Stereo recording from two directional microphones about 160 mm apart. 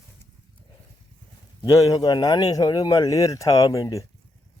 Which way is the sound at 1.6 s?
25° left (ahead or behind).